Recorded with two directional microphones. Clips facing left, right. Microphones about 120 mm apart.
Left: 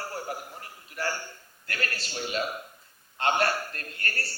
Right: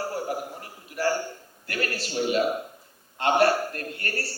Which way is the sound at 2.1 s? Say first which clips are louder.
Right 8 dB; 15° right (ahead or behind).